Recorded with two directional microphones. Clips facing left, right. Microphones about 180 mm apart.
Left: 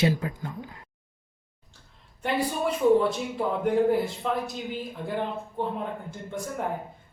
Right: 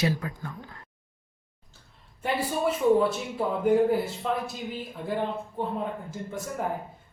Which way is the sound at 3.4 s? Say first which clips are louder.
Right 2 dB; 5° right (ahead or behind).